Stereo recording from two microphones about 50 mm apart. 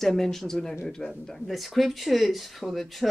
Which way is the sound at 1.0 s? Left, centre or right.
Centre.